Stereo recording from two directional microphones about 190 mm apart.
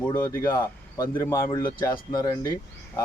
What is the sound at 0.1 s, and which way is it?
Speech, 15° left (ahead or behind).